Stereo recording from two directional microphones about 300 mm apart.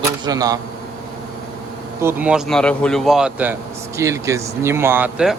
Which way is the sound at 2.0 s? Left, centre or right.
Centre.